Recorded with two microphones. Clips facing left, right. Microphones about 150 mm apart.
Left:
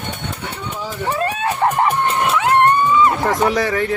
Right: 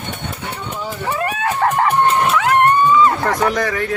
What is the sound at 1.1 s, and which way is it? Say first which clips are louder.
Music: right 1 dB; 25° left (ahead or behind).